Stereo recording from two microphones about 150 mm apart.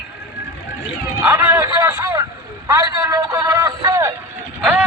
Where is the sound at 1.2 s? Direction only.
15° right (ahead or behind).